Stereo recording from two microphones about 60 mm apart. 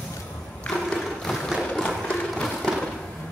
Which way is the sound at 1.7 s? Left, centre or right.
Centre.